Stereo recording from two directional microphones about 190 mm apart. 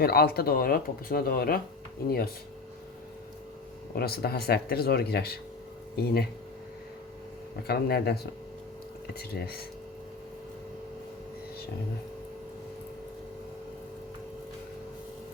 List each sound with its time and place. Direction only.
0.0 s speech: 55° left (ahead or behind)
3.9 s speech: 55° left (ahead or behind)
7.7 s speech: 55° left (ahead or behind)